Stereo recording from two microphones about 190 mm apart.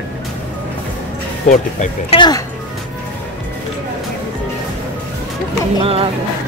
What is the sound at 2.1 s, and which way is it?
Speech, 25° left (ahead or behind).